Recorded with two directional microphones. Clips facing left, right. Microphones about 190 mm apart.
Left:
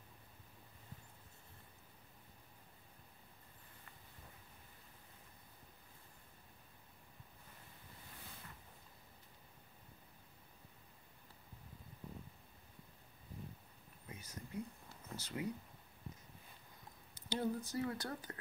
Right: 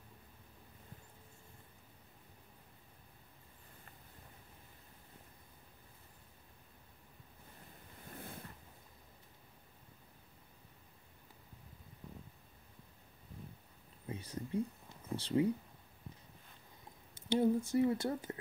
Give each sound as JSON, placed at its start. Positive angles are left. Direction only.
{"t": 8.1, "sound": "a sound", "side_deg": -55}
{"t": 14.0, "sound": "speech", "side_deg": -30}
{"t": 17.3, "sound": "speech", "side_deg": -25}